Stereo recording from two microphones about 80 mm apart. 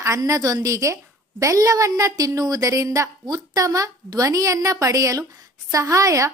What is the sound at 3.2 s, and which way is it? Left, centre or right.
A woman's voice, right.